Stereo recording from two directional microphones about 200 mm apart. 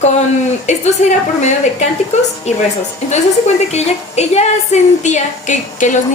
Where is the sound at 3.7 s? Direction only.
35° left (ahead or behind).